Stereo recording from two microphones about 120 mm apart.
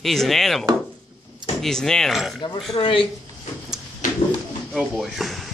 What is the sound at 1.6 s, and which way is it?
Speech, 5° left (ahead or behind).